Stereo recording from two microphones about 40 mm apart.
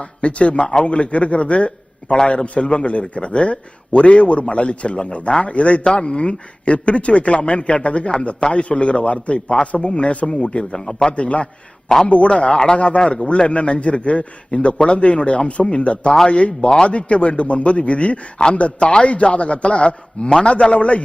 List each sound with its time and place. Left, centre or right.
0.0 s a man's voice: left
2.0 s a man's voice: centre
2.3 s a man's voice: left; by 11.1 s centre
11.1 s a man's voice: left